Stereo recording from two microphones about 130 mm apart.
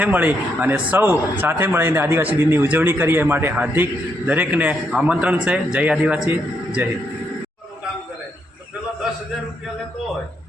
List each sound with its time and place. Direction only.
0.0 s a man's voice: 15° right (ahead or behind)